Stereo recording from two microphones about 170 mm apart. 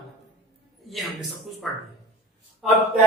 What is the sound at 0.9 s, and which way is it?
Speech, centre (ahead or behind).